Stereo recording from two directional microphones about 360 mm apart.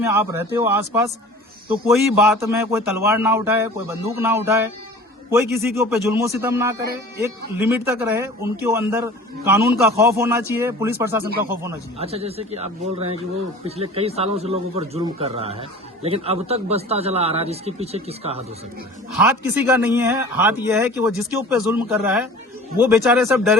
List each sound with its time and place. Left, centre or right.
0.0 s speech: centre
5.7 s speech: centre
19.1 s speech: centre